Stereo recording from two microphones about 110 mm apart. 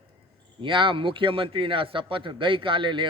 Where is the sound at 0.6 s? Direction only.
50° right (ahead or behind).